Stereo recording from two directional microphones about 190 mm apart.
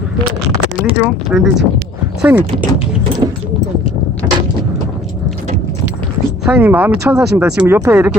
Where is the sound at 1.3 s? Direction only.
Centre (ahead or behind).